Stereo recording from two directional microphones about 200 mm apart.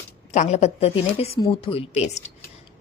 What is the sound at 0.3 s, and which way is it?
Speech, 35° left (ahead or behind).